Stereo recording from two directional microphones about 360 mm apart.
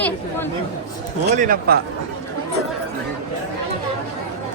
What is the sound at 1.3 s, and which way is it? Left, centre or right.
Speech, right.